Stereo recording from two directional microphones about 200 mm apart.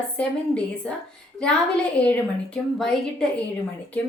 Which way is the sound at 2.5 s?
5° left (ahead or behind).